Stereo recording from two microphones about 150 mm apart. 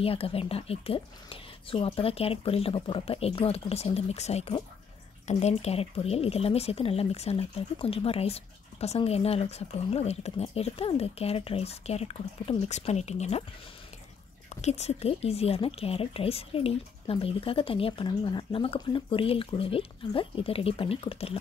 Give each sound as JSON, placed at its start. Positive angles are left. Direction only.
{"t": 0.0, "sound": "speech", "side_deg": 40}
{"t": 14.5, "sound": "speech", "side_deg": 45}